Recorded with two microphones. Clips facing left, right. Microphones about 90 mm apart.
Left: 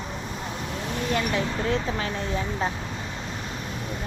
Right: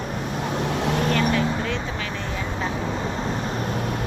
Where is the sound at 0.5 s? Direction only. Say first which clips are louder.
Right 8 dB; 90° right; by 1.1 s 65° right (ahead or behind).